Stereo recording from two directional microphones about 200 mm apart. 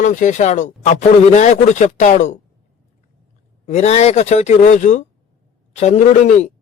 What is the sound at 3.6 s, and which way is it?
Speech, 35° left (ahead or behind).